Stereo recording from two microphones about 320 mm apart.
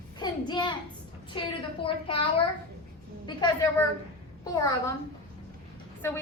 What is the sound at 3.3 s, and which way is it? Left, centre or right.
Speech, centre.